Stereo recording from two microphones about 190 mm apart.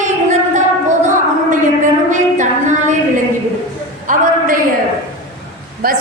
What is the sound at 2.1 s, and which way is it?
Speech, 40° right (ahead or behind).